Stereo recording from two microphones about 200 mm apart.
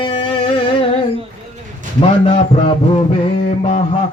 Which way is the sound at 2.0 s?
25° left (ahead or behind).